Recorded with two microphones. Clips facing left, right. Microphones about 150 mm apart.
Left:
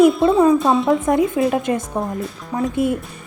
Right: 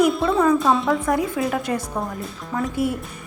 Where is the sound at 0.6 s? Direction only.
Centre (ahead or behind).